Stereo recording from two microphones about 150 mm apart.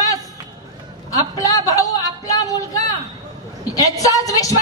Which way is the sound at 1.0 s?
25° left (ahead or behind).